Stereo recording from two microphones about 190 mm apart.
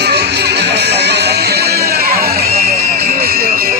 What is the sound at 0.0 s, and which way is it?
Music, 60° right (ahead or behind).